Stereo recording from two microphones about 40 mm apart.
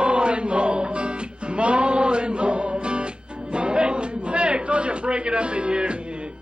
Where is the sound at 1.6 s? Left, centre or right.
Right.